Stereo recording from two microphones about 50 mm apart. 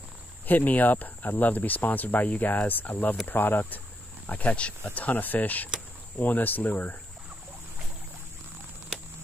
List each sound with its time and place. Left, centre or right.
0.5 s speech: left
4.3 s speech: left